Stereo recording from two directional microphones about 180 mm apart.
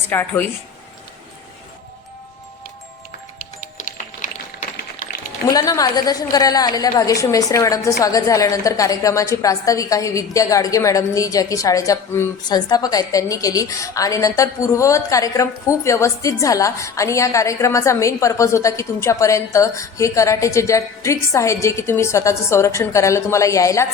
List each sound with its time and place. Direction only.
0.1 s a woman's voice: 10° left (ahead or behind)
3.6 s music: 45° left (ahead or behind)
5.5 s a woman's voice: 20° left (ahead or behind)